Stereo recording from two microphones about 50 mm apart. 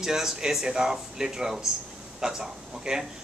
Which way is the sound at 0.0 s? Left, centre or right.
Centre.